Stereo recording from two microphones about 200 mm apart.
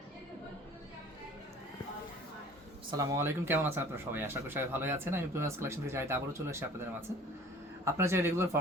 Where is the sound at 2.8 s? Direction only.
20° right (ahead or behind).